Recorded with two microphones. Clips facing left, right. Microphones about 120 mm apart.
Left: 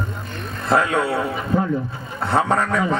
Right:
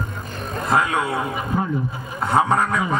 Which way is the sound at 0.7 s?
20° right (ahead or behind).